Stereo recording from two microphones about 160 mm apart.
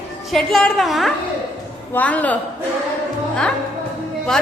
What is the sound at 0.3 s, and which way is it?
A woman's voice, centre (ahead or behind).